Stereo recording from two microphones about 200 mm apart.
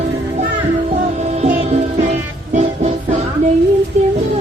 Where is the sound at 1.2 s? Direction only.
35° right (ahead or behind).